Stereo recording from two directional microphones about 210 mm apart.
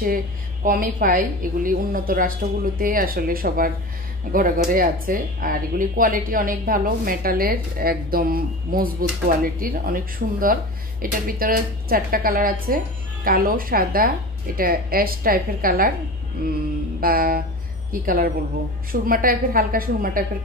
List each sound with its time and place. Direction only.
0.7 s a woman's voice: 40° right (ahead or behind)